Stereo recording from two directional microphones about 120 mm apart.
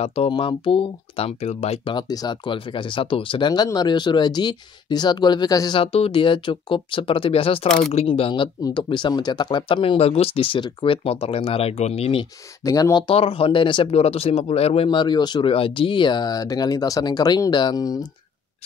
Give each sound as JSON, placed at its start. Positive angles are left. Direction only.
{"t": 0.0, "sound": "speech", "side_deg": 60}
{"t": 0.3, "sound": "speech", "side_deg": 45}
{"t": 2.0, "sound": "speech", "side_deg": 35}
{"t": 5.8, "sound": "speech", "side_deg": 55}
{"t": 12.6, "sound": "speech", "side_deg": 30}
{"t": 13.0, "sound": "speech", "side_deg": 50}